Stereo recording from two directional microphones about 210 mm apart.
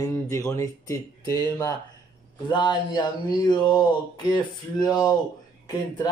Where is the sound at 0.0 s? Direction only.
15° left (ahead or behind).